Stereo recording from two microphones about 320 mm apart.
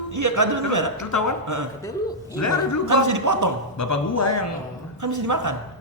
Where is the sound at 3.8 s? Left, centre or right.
Left.